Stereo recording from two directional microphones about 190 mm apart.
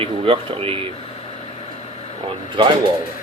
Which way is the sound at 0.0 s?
30° right (ahead or behind).